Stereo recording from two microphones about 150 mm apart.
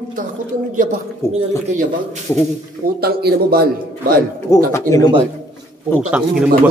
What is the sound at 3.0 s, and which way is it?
Speech, 90° right.